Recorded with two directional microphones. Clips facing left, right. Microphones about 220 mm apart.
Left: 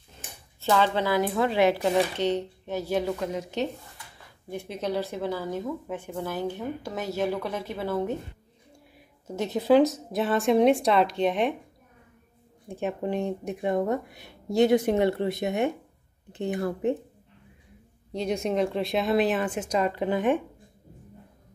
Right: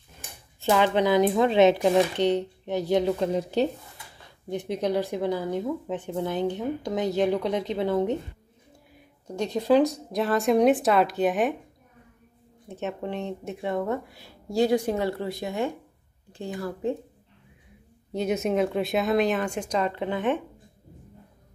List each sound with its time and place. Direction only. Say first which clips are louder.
0.6 s speech: right 2 dB; 15° right (ahead or behind)
3.3 s speech: right 5 dB; 35° right (ahead or behind)
4.5 s speech: right 4 dB; 15° right (ahead or behind)
9.3 s speech: left 1 dB; 5° left (ahead or behind)
12.6 s speech: left 2 dB; 10° left (ahead or behind)
18.1 s speech: right 2 dB; 5° right (ahead or behind); by 20.3 s 10° left (ahead or behind)